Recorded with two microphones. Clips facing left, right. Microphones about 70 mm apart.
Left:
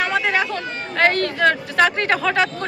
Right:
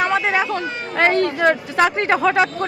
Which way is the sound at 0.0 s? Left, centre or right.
Right.